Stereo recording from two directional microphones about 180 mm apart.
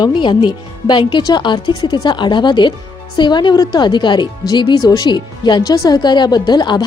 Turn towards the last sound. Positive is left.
turn(degrees=25)  # may be behind; listen again after turning